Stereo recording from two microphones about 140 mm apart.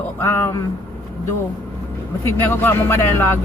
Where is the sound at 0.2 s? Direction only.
15° left (ahead or behind).